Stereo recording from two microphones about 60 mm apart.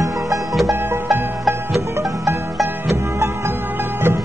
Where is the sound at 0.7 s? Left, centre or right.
Right.